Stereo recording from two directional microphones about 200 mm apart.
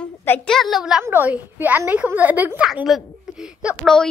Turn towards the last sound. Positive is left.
turn(degrees=0)  # may be behind; listen again after turning